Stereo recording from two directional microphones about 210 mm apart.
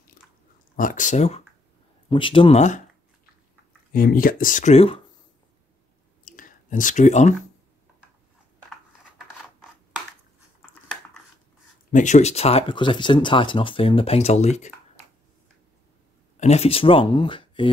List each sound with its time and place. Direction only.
0.7 s speech: 40° left (ahead or behind)
3.9 s speech: 45° left (ahead or behind)
6.2 s a sound: 40° left (ahead or behind)
11.9 s speech: 35° left (ahead or behind)
16.3 s speech: 30° left (ahead or behind)